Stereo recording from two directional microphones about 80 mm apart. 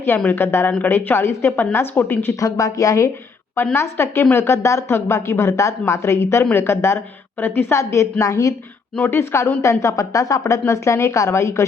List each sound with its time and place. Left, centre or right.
0.3 s speech: left
2.4 s speech: left
3.8 s a woman's voice: left
9.0 s a woman's voice: left